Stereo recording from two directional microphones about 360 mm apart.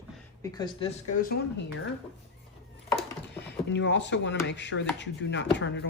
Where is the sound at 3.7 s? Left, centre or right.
Left.